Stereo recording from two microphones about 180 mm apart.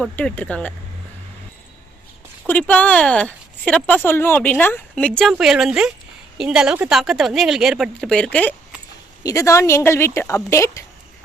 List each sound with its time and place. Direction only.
0.0 s speech: 5° left (ahead or behind)
2.5 s speech: 10° left (ahead or behind)